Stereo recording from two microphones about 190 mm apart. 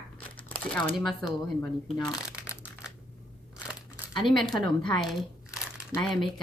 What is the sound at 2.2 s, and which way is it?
Crumpling, 5° right (ahead or behind).